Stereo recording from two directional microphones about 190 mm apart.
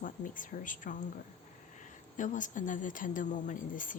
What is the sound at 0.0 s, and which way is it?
Speech, 45° left (ahead or behind).